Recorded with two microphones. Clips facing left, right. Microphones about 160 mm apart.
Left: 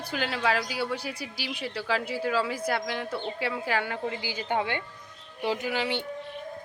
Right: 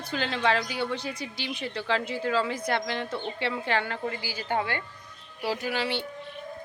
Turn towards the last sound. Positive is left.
turn(degrees=15)  # may be behind; listen again after turning